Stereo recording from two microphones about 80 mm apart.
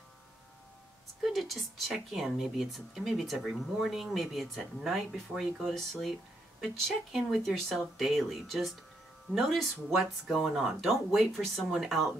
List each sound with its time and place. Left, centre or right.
1.2 s speech: centre
10.2 s speech: centre